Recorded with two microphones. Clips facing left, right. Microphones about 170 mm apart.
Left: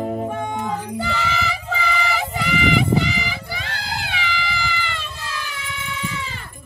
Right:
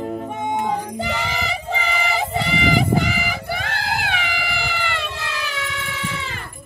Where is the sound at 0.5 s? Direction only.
20° right (ahead or behind).